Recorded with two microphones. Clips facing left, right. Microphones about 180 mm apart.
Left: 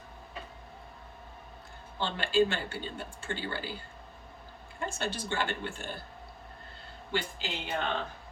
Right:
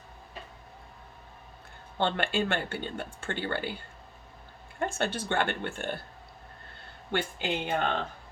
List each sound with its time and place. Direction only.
2.0 s speech: 60° right (ahead or behind)
4.8 s speech: 55° right (ahead or behind)
7.1 s speech: 55° right (ahead or behind)